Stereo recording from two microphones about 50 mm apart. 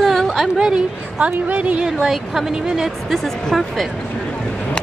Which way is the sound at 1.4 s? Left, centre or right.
Right.